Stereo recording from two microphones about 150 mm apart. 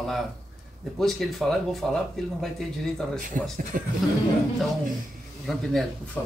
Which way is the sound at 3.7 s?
70° right (ahead or behind).